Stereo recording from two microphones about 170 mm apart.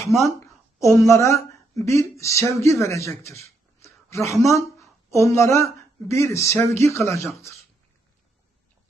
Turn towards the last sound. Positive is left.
turn(degrees=15)  # may be behind; listen again after turning